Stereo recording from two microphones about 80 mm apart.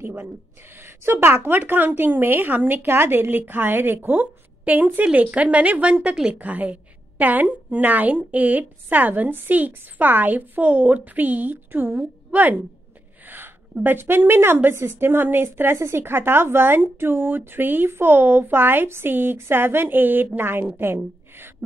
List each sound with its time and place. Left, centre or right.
0.8 s a woman's voice: right